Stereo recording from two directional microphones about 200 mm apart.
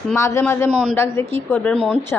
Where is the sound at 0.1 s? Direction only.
15° left (ahead or behind).